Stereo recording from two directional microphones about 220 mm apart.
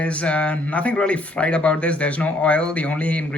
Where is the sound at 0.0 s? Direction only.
5° left (ahead or behind).